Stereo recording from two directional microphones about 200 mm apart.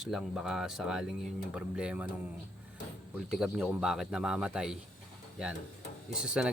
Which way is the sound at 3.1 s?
Centre (ahead or behind).